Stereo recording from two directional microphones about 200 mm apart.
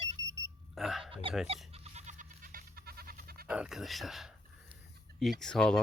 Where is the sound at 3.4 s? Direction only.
5° right (ahead or behind).